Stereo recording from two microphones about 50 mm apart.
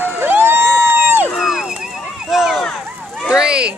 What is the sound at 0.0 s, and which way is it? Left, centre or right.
Vehicle, right.